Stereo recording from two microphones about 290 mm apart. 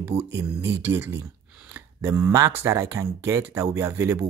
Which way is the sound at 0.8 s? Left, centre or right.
Centre.